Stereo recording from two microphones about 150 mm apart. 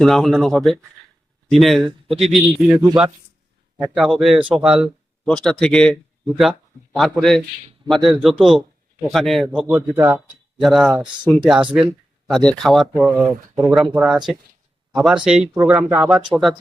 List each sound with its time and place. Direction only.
0.0 s a man's voice: centre (ahead or behind)
3.8 s a man's voice: 5° right (ahead or behind)
9.5 s speech: 10° right (ahead or behind)
10.6 s a man's voice: centre (ahead or behind)
10.9 s speech: 30° right (ahead or behind)
11.3 s speech: 5° right (ahead or behind)
11.9 s a man's voice: 5° left (ahead or behind)